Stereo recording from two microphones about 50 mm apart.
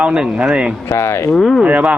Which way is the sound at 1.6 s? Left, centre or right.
Right.